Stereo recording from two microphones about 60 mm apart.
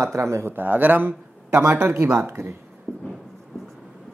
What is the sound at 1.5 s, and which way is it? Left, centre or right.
Speech, right.